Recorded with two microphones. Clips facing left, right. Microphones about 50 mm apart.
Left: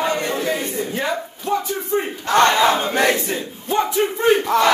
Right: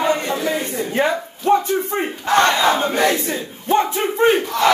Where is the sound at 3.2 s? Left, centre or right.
Right.